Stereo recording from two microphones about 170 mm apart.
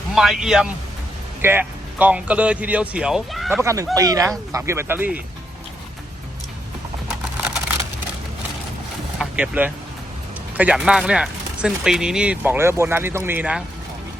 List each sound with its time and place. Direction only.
0.1 s a man's voice: centre (ahead or behind)
3.6 s speech: 15° right (ahead or behind)
9.1 s vehicle: 5° right (ahead or behind)
10.6 s speech: 5° right (ahead or behind)